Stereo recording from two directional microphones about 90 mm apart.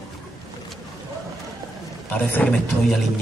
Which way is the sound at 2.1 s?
20° left (ahead or behind).